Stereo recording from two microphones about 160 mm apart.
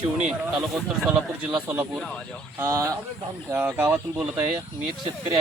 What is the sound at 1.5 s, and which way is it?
Speech, 10° right (ahead or behind).